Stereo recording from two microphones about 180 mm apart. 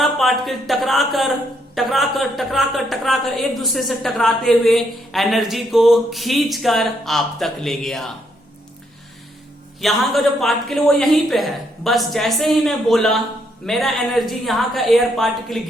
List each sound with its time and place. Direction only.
0.0 s a woman's voice: centre (ahead or behind)
9.8 s a woman's voice: centre (ahead or behind)